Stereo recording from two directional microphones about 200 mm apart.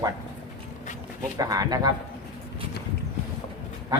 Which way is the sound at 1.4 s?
20° right (ahead or behind).